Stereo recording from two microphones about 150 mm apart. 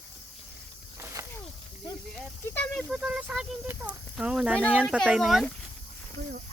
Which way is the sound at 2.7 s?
Centre (ahead or behind).